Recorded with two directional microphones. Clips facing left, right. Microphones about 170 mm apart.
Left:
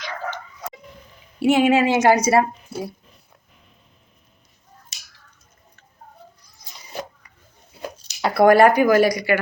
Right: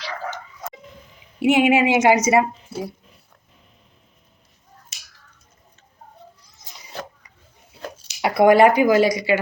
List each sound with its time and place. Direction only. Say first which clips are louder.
1.4 s a woman's voice: even; 15° right (ahead or behind)
2.7 s speech: even; centre (ahead or behind)
8.2 s speech: even; 20° right (ahead or behind)